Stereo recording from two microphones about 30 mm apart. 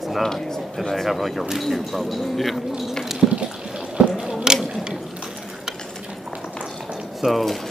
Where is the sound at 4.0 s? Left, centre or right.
Right.